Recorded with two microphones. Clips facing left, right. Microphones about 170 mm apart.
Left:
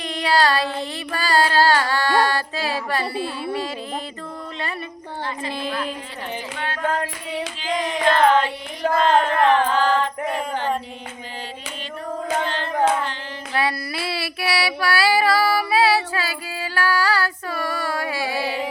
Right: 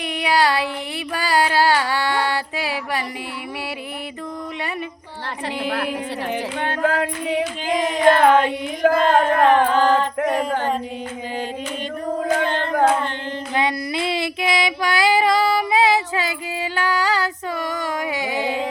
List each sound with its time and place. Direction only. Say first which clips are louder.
0.0 s a sound: even; 15° right (ahead or behind)
1.1 s music: even; 15° right (ahead or behind)
5.6 s a woman's voice: right 4 dB; 75° right (ahead or behind)
6.8 s singing: right 3 dB; 90° right
7.9 s a sound: right 6 dB; 50° right (ahead or behind)
8.3 s music: right 3 dB; 55° right (ahead or behind)
12.4 s hands: right 3 dB; 55° right (ahead or behind)
13.5 s child singing: right 1 dB; 20° right (ahead or behind)